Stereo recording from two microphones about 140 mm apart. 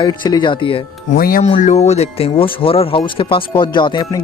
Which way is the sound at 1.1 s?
90° left.